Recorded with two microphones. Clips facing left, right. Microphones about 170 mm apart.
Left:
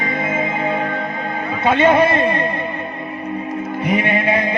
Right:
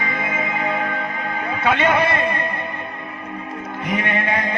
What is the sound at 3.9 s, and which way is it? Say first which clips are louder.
Music: left 4 dB; 20° left (ahead or behind).